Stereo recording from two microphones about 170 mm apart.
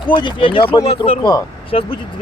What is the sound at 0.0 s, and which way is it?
Speech, 25° left (ahead or behind).